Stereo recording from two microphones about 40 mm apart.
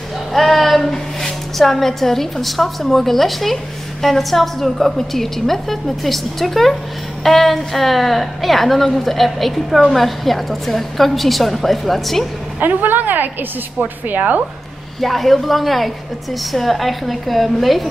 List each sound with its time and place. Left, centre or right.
0.3 s a sound: centre
1.6 s a woman's voice: centre
12.5 s a woman's voice: right
15.0 s a woman's voice: centre